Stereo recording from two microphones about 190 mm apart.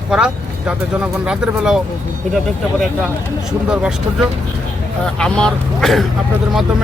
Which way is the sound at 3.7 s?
5° right (ahead or behind).